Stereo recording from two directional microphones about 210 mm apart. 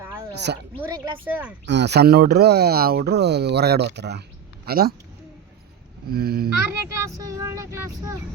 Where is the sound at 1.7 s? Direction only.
55° right (ahead or behind).